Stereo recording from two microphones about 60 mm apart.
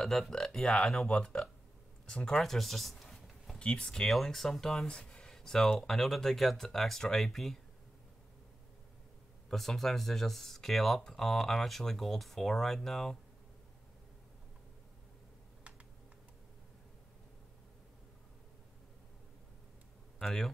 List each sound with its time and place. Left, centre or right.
0.0 s speech: centre
2.0 s a sound: centre
3.5 s speech: centre
9.5 s speech: centre
20.2 s speech: centre